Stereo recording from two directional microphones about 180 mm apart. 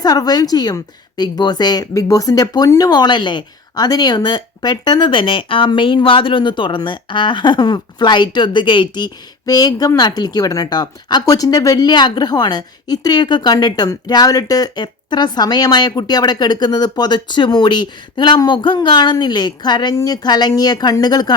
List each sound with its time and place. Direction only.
0.0 s a woman's voice: 20° left (ahead or behind)